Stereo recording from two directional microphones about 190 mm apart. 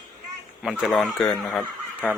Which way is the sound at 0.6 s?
5° right (ahead or behind).